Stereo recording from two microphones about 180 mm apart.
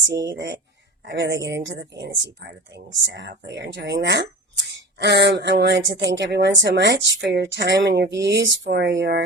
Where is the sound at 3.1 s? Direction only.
75° right (ahead or behind).